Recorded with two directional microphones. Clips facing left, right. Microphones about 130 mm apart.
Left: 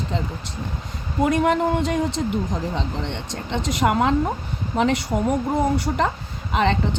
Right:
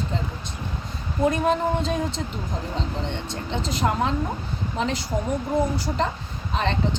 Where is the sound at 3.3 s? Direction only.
75° left (ahead or behind).